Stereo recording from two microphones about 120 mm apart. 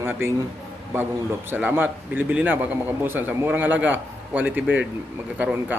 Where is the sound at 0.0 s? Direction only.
20° right (ahead or behind).